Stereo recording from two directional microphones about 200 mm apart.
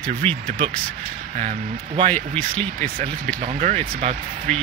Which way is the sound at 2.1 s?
10° left (ahead or behind).